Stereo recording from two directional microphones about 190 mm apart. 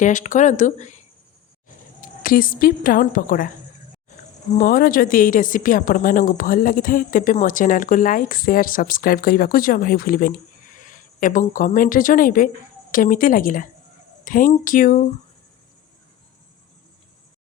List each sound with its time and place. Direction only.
0.0 s speech: 40° left (ahead or behind)
2.0 s a woman's voice: 50° left (ahead or behind)
4.5 s a woman's voice: 45° left (ahead or behind)